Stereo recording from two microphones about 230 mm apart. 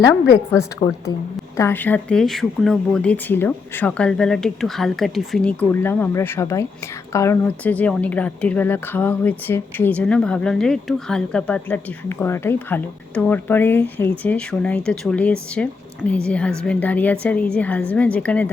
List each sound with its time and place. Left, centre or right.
0.0 s a woman's voice: centre